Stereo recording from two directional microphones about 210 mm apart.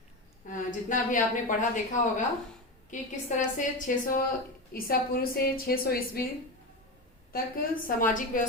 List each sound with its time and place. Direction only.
0.5 s a woman's voice: 40° left (ahead or behind)
7.3 s a woman's voice: 45° left (ahead or behind)